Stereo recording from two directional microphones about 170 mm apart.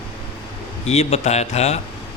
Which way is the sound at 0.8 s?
40° left (ahead or behind).